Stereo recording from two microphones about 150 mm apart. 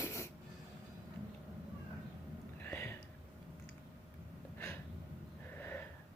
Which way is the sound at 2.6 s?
15° left (ahead or behind).